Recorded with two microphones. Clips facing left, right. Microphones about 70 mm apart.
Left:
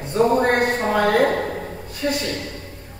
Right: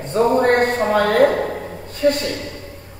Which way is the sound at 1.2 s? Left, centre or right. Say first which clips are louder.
Right 4 dB; centre.